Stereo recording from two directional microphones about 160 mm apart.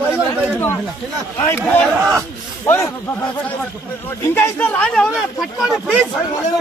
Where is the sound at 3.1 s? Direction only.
15° left (ahead or behind); by 6.0 s centre (ahead or behind).